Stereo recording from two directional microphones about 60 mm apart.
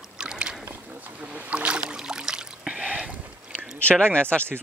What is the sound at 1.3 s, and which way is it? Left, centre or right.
Rowboat, centre.